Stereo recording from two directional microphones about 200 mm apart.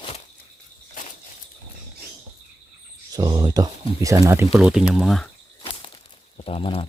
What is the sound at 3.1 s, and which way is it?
Speech, 20° right (ahead or behind).